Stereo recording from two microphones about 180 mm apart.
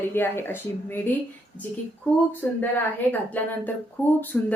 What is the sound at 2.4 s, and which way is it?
A woman's voice, 10° left (ahead or behind).